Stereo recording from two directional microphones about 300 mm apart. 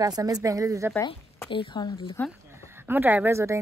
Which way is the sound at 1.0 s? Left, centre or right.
Centre.